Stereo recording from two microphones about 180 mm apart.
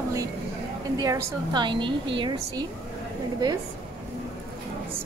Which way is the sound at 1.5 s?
25° right (ahead or behind).